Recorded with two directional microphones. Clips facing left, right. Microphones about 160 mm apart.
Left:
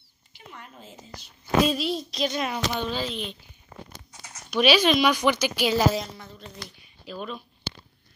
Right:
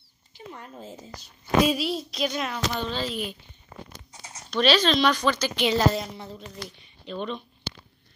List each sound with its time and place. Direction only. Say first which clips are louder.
0.3 s a woman's voice: right 4 dB; 35° right (ahead or behind)
1.7 s a woman's voice: even; 5° right (ahead or behind)
2.4 s speech: left 1 dB; 5° left (ahead or behind)
4.5 s speech: left 1 dB; 10° left (ahead or behind)
7.1 s speech: right 3 dB; 5° left (ahead or behind)